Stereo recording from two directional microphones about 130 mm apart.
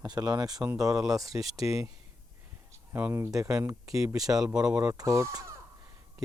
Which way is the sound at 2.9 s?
15° right (ahead or behind).